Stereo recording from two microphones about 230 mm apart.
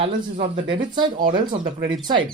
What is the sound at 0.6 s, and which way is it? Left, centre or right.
Speech, right.